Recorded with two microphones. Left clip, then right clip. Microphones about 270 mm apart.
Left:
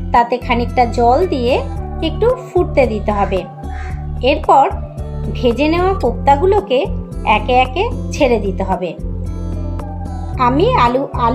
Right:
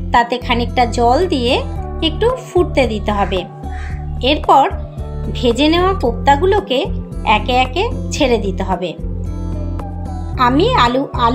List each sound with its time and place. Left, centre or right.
0.1 s speech: right
10.3 s speech: right